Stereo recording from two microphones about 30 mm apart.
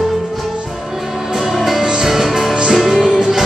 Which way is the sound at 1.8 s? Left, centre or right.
Right.